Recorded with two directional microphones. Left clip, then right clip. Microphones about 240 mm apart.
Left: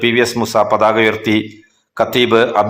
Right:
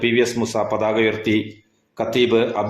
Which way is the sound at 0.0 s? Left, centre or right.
Centre.